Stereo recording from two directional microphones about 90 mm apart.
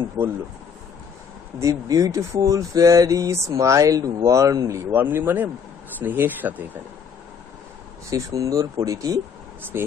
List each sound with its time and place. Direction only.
0.2 s speech: 20° right (ahead or behind)
1.6 s speech: 40° right (ahead or behind)
4.9 s speech: 25° right (ahead or behind)
8.1 s speech: 40° right (ahead or behind)